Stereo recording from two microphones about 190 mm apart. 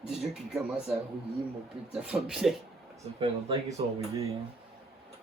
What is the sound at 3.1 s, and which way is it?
Speech, 25° right (ahead or behind).